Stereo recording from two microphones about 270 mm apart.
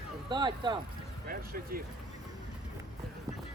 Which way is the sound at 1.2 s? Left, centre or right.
Right.